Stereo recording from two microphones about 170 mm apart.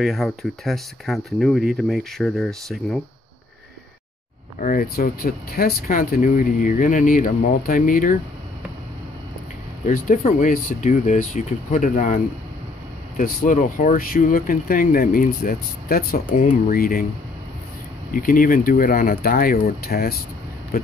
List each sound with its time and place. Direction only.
0.0 s speech: centre (ahead or behind)
4.6 s speech: 55° left (ahead or behind)
9.8 s speech: 50° left (ahead or behind)
13.4 s speech: 50° left (ahead or behind)
18.1 s speech: 55° left (ahead or behind)